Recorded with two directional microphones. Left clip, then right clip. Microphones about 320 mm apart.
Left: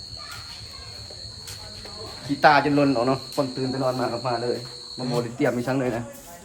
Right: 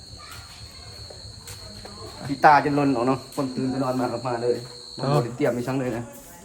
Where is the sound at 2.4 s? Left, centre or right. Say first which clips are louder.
Right 1 dB; centre.